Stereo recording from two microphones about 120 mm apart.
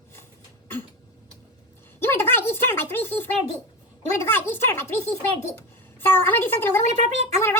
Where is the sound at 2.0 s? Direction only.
20° left (ahead or behind).